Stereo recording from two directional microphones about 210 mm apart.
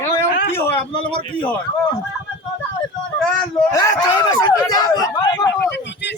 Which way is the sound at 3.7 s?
15° left (ahead or behind).